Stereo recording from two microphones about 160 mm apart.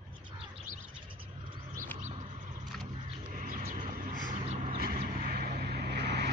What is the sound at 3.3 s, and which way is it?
Vehicle, 55° right (ahead or behind).